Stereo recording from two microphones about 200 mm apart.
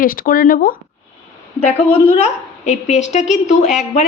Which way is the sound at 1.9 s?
30° left (ahead or behind).